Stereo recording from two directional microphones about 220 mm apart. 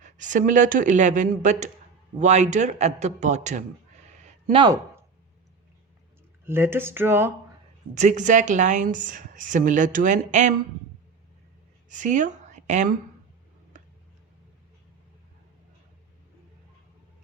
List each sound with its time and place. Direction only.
0.0 s a woman's voice: 35° right (ahead or behind)
4.2 s a sound: 30° right (ahead or behind)
4.6 s speech: 15° right (ahead or behind)
6.4 s speech: 10° right (ahead or behind)
7.9 s a woman's voice: 35° right (ahead or behind)
11.9 s speech: 35° right (ahead or behind)